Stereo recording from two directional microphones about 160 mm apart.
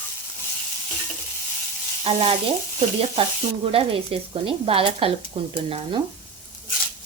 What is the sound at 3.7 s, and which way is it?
Speech, 35° right (ahead or behind).